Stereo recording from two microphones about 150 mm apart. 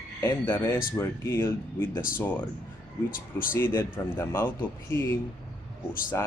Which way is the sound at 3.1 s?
70° left (ahead or behind).